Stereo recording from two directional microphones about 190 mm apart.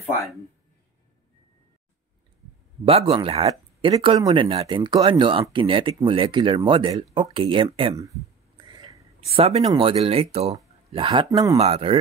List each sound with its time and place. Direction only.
2.8 s speech: 30° right (ahead or behind)
8.7 s a sound: 20° right (ahead or behind)
9.3 s speech: 35° right (ahead or behind); by 11.5 s 20° right (ahead or behind)
11.5 s speech: 30° right (ahead or behind)